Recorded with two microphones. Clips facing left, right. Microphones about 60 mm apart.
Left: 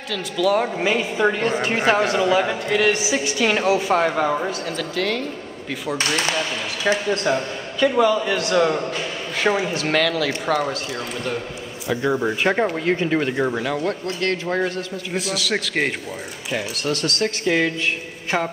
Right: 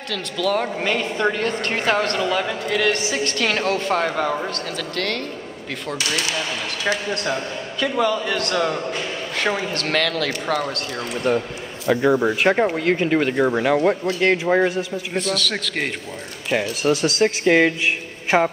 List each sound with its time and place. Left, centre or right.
0.1 s a woman's voice: centre
5.9 s speech: left
7.1 s a woman's voice: centre
11.3 s a man's voice: right
12.1 s speech: centre
13.6 s a man's voice: right
15.1 s speech: centre
16.9 s a man's voice: centre